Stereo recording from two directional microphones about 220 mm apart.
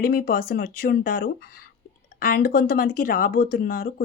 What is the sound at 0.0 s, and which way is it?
A woman's voice, 45° left (ahead or behind).